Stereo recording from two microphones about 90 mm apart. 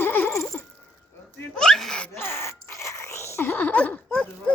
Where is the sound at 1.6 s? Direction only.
5° left (ahead or behind).